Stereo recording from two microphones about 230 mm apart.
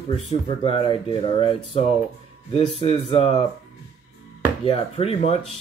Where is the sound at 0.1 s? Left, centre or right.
Left.